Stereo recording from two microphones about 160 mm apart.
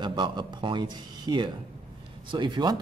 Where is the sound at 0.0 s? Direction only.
30° right (ahead or behind).